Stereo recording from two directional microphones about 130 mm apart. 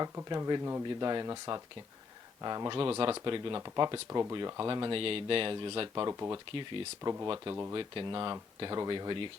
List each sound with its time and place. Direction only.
0.3 s speech: 30° right (ahead or behind)
6.0 s speech: 25° right (ahead or behind)
6.3 s speech: 40° right (ahead or behind)